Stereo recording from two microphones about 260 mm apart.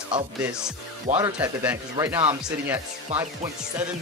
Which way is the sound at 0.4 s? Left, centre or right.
Centre.